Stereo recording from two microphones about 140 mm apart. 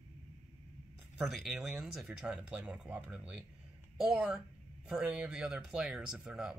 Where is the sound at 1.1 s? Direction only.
5° right (ahead or behind).